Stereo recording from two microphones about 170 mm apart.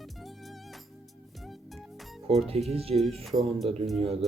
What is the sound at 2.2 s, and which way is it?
Speech, 35° right (ahead or behind).